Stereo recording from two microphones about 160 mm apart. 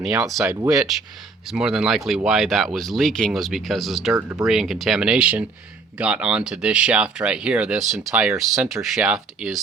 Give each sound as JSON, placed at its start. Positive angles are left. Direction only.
{"t": 0.2, "sound": "speech", "side_deg": 0}
{"t": 0.4, "sound": "speech", "side_deg": -20}
{"t": 0.7, "sound": "speech", "side_deg": 0}
{"t": 4.1, "sound": "speech", "side_deg": -20}
{"t": 4.4, "sound": "speech", "side_deg": 0}